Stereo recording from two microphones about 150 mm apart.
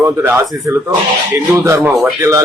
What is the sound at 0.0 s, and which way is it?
Speech, 15° right (ahead or behind).